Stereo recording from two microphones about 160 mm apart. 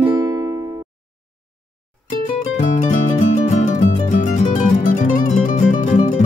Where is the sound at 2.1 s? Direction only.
50° left (ahead or behind).